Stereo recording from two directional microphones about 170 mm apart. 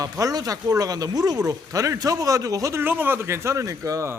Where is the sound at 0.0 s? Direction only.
20° right (ahead or behind).